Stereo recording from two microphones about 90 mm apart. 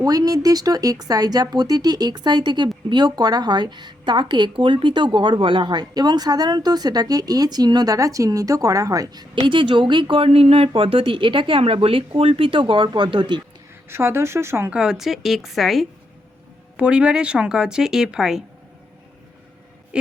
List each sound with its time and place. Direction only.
0.0 s a woman's voice: 45° right (ahead or behind)
9.3 s speech: 65° right (ahead or behind); by 10.7 s 90° right
10.8 s speech: 80° right; by 13.4 s 60° right (ahead or behind)
13.9 s speech: 30° right (ahead or behind)
14.7 s a woman's voice: 5° right (ahead or behind)
16.7 s speech: 10° right (ahead or behind)
19.9 s speech: 10° right (ahead or behind)